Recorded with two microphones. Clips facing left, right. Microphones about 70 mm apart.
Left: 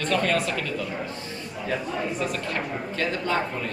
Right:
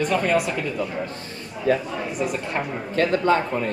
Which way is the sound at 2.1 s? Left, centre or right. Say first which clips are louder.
Right 3 dB; centre.